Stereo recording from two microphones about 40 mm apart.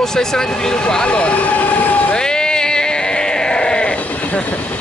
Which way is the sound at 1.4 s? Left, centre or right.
Left.